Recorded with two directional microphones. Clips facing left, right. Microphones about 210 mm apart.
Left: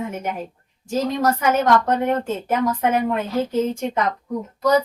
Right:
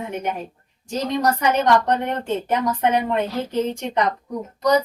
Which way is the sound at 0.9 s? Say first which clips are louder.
Left 1 dB; 5° left (ahead or behind).